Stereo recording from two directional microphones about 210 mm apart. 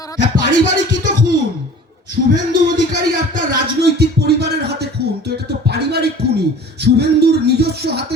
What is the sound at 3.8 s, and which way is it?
Music, 50° right (ahead or behind).